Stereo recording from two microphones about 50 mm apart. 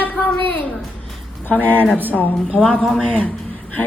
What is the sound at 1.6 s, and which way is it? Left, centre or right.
Speech, left.